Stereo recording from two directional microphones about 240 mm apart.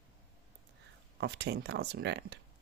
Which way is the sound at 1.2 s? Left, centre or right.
Right.